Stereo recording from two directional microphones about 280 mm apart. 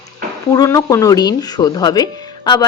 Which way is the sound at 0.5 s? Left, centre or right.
Centre.